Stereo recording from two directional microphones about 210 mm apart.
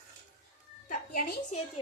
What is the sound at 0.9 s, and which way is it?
Music, 40° left (ahead or behind).